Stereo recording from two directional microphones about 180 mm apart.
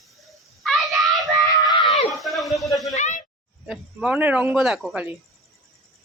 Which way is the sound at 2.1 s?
Centre (ahead or behind).